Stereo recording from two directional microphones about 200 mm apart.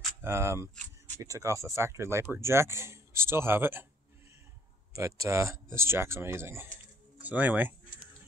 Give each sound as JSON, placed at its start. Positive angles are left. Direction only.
{"t": 0.2, "sound": "speech", "side_deg": -10}
{"t": 4.9, "sound": "speech", "side_deg": -15}